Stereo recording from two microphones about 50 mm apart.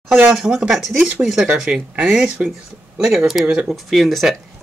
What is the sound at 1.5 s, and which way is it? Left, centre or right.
Speech, right.